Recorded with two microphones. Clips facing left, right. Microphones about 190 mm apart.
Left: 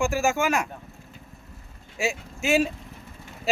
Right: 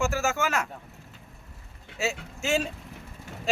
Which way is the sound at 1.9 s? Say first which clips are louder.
Left 2 dB; 10° left (ahead or behind).